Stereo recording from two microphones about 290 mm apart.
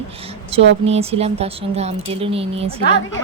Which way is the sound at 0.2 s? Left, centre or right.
Centre.